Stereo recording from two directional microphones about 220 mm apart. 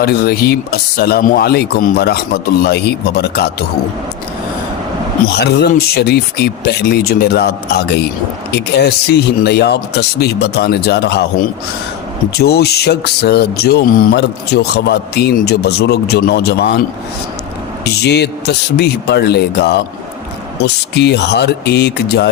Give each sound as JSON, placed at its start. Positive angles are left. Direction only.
{"t": 0.0, "sound": "speech", "side_deg": 45}
{"t": 5.3, "sound": "speech", "side_deg": 45}
{"t": 18.0, "sound": "speech", "side_deg": 50}
{"t": 20.9, "sound": "speech", "side_deg": 50}